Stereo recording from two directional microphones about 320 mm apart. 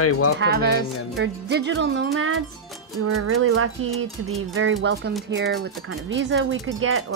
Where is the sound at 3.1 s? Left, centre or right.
Right.